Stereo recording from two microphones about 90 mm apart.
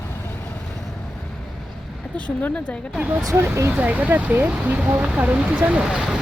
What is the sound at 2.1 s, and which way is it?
Speech, 15° left (ahead or behind).